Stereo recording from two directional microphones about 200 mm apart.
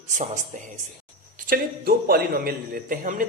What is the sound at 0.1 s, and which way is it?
A man's voice, 40° right (ahead or behind).